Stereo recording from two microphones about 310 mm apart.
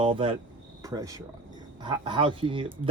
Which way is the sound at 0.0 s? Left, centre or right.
Centre.